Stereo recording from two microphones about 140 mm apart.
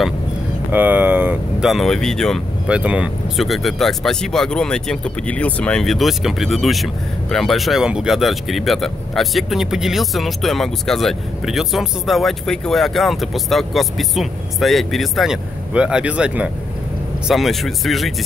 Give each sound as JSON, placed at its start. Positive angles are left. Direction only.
{"t": 0.7, "sound": "a sound", "side_deg": -10}
{"t": 1.7, "sound": "speech", "side_deg": 0}
{"t": 2.7, "sound": "speech", "side_deg": -10}